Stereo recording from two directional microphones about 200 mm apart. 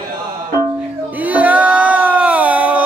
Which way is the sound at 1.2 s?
5° right (ahead or behind).